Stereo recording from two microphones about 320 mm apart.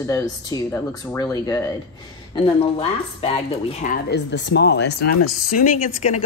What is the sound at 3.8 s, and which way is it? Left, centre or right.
Speech, left.